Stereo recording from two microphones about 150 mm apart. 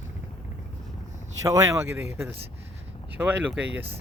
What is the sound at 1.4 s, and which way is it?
Speech, 20° right (ahead or behind).